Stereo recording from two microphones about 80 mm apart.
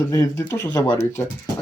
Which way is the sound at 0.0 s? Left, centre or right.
Left.